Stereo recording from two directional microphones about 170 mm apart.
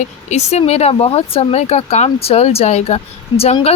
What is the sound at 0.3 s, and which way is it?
Speech, 40° left (ahead or behind).